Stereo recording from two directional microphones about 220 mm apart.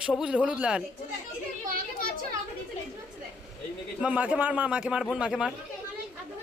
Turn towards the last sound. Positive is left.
turn(degrees=-5)  # may be behind; listen again after turning